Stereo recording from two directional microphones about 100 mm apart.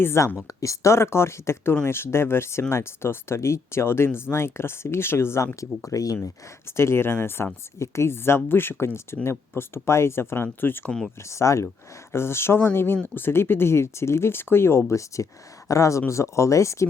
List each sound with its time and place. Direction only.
0.0 s speech: 25° left (ahead or behind)
10.8 s speech: 5° left (ahead or behind)
11.2 s speech: 30° left (ahead or behind)